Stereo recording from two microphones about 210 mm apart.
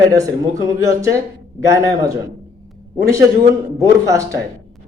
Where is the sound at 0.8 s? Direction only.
15° right (ahead or behind).